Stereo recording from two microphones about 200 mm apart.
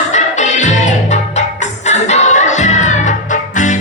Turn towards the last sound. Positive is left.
turn(degrees=35)  # may be behind; listen again after turning